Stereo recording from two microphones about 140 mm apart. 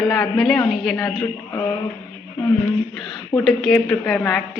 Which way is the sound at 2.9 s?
Centre (ahead or behind).